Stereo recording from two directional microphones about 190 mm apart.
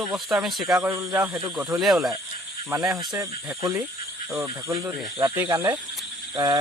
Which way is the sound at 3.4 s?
15° right (ahead or behind).